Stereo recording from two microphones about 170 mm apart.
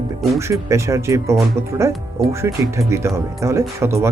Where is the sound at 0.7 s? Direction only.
15° right (ahead or behind).